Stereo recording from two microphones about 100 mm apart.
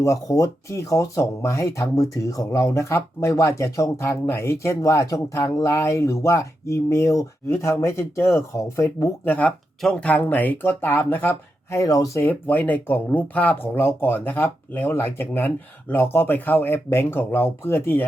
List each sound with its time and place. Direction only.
0.0 s speech: 35° left (ahead or behind)
9.2 s speech: 15° left (ahead or behind)
11.8 s speech: 35° left (ahead or behind)
12.2 s speech: 15° left (ahead or behind)